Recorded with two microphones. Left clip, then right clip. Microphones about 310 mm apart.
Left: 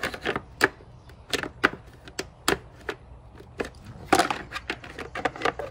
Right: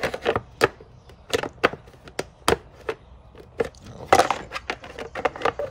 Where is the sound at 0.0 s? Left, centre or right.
Centre.